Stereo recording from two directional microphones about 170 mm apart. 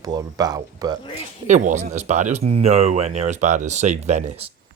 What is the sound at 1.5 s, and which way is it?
Speech, 45° right (ahead or behind).